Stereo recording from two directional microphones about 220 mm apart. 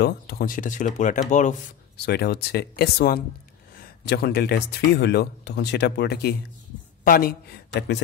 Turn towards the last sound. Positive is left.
turn(degrees=50)  # may be behind; listen again after turning